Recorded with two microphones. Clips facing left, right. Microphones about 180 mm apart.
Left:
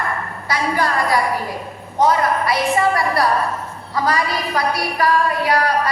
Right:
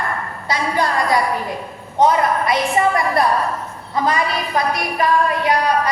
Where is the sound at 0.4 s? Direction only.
20° right (ahead or behind).